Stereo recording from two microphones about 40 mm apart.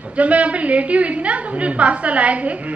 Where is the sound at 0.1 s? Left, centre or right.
Right.